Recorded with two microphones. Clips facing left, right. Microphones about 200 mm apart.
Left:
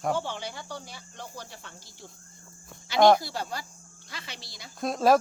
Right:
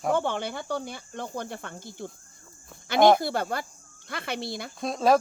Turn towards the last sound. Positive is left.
turn(degrees=0)  # may be behind; listen again after turning